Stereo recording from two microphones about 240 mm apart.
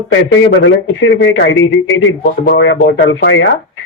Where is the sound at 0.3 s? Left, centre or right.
Left.